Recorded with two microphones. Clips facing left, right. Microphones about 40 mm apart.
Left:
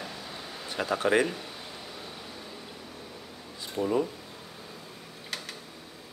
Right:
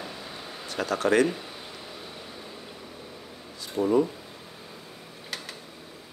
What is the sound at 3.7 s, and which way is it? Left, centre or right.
Speech, centre.